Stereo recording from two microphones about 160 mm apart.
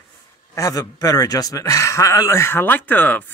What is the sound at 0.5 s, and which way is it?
A man's voice, 20° left (ahead or behind).